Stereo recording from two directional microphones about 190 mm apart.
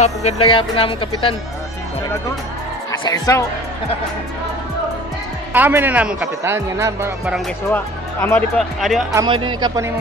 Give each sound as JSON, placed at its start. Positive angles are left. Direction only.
{"t": 0.0, "sound": "speech", "side_deg": 35}
{"t": 3.0, "sound": "speech", "side_deg": 20}
{"t": 5.5, "sound": "speech", "side_deg": -10}
{"t": 7.7, "sound": "speech", "side_deg": 10}
{"t": 9.1, "sound": "speech", "side_deg": -25}